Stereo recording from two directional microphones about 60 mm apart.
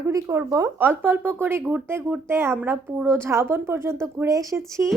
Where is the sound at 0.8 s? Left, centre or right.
Right.